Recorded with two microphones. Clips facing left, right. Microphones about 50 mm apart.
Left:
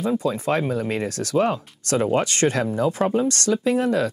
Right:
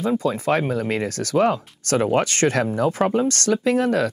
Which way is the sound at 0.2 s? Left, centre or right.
Right.